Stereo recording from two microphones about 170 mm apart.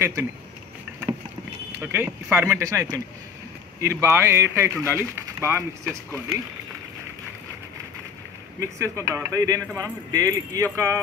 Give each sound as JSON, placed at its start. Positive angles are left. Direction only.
{"t": 0.0, "sound": "speech", "side_deg": -15}
{"t": 1.8, "sound": "speech", "side_deg": -15}
{"t": 8.5, "sound": "speech", "side_deg": -15}